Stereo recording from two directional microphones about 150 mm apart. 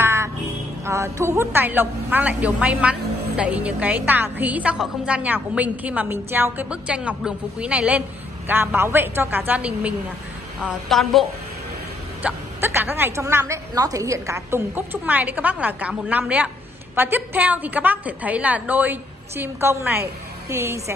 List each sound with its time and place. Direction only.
0.0 s music: 15° right (ahead or behind)
0.8 s a woman's voice: 20° right (ahead or behind); by 11.2 s centre (ahead or behind)
12.2 s a woman's voice: 10° right (ahead or behind)